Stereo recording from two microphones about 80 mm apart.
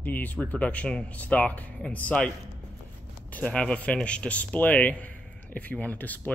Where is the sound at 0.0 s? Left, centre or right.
Left.